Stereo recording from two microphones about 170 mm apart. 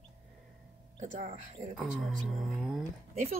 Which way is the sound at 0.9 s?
45° right (ahead or behind).